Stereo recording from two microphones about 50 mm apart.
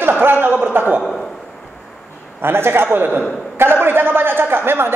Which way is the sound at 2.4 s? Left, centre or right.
Right.